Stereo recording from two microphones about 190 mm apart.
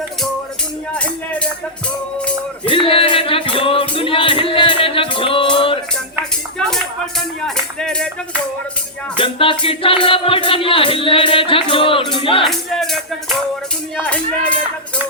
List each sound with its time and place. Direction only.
0.9 s music: 5° left (ahead or behind)
2.6 s music: 30° left (ahead or behind)
7.4 s speech: 5° left (ahead or behind)
9.1 s music: 25° left (ahead or behind)
12.5 s music: centre (ahead or behind)